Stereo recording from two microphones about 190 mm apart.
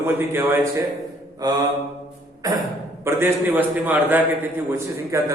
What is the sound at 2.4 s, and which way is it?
A man's voice, 20° right (ahead or behind).